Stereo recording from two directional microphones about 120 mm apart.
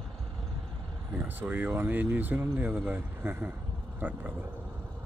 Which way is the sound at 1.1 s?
15° right (ahead or behind).